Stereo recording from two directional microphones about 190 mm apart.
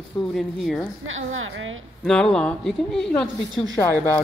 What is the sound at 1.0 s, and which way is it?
Speech, 90° right.